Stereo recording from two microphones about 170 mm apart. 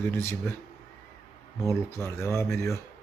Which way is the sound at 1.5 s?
15° left (ahead or behind).